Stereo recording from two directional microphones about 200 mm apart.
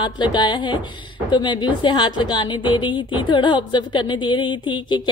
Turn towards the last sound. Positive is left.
turn(degrees=25)  # may be behind; listen again after turning